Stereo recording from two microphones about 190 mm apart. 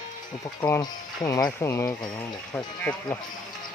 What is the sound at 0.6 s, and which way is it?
Speech, 20° left (ahead or behind).